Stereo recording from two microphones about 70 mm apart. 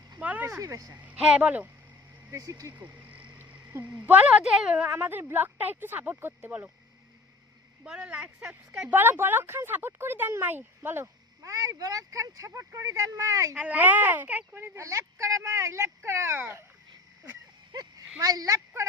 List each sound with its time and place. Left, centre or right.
0.2 s a sound: right
0.4 s speech: right
1.0 s speech: centre
2.3 s speech: right
2.7 s a sound: right
4.5 s a woman's voice: centre
4.9 s speech: right
7.9 s a woman's voice: centre
8.9 s speech: right
11.0 s speech: right
13.6 s speech: right
14.5 s speech: right
17.7 s a sound: right
18.2 s speech: right